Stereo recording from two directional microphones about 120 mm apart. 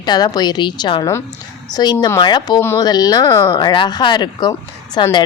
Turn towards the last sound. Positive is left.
turn(degrees=40)  # may be behind; listen again after turning